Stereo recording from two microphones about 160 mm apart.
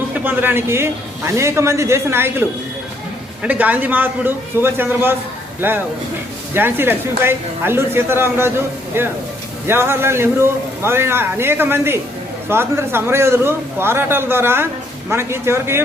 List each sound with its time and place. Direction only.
0.1 s speech: 10° right (ahead or behind)
3.4 s a man's voice: 10° right (ahead or behind)